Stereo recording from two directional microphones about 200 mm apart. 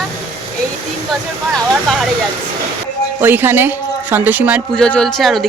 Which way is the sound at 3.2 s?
10° right (ahead or behind).